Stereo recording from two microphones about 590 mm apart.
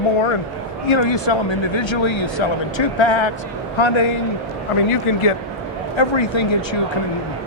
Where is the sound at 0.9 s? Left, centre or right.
Left.